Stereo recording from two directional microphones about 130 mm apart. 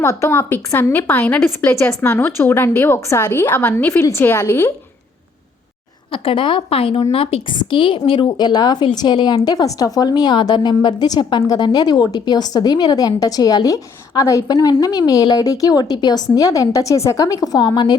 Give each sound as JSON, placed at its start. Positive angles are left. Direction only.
{"t": 0.0, "sound": "a woman's voice", "side_deg": 20}
{"t": 6.1, "sound": "speech", "side_deg": 40}
{"t": 7.5, "sound": "a woman's voice", "side_deg": 35}